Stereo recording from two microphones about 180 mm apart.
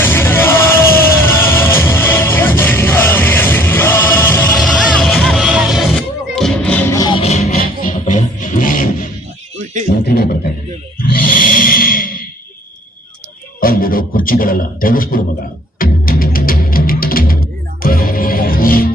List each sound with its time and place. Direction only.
0.0 s music: 10° left (ahead or behind)
4.5 s music: centre (ahead or behind); by 7.2 s 20° left (ahead or behind)
7.2 s music: 35° left (ahead or behind)
7.5 s music: 50° left (ahead or behind)
10.0 s a sound: 60° left (ahead or behind)
13.6 s a sound: 55° left (ahead or behind)
15.8 s music: 55° left (ahead or behind)